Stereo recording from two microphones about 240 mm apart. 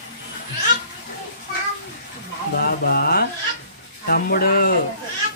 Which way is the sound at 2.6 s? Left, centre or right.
Left.